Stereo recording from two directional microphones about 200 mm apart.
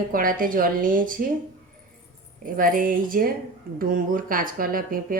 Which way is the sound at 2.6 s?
45° right (ahead or behind).